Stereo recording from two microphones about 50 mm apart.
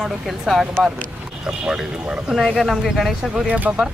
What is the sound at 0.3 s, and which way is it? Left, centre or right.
Speech, centre.